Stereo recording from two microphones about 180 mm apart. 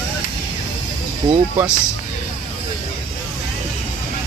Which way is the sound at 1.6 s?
5° right (ahead or behind).